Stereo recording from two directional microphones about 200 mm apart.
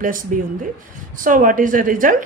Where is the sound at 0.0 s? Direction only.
45° right (ahead or behind).